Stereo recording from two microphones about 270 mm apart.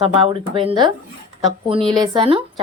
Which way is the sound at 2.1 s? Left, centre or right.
Centre.